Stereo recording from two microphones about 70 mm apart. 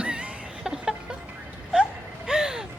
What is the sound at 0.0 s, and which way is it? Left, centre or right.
Music, centre.